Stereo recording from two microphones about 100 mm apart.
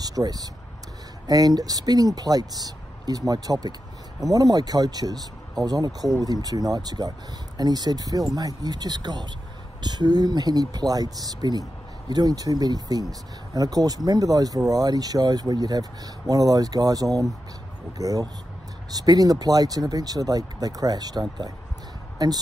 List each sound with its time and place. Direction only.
0.0 s speech: 40° right (ahead or behind)